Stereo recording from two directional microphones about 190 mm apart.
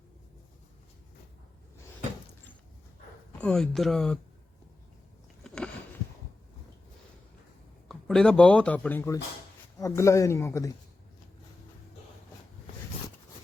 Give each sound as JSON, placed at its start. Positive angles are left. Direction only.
{"t": 3.4, "sound": "speech", "side_deg": 0}
{"t": 5.4, "sound": "a sound", "side_deg": 5}
{"t": 7.9, "sound": "a man's voice", "side_deg": 0}